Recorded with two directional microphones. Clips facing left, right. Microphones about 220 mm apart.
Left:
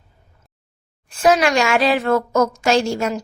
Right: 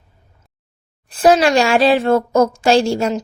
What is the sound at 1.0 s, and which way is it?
A woman's voice, 35° right (ahead or behind).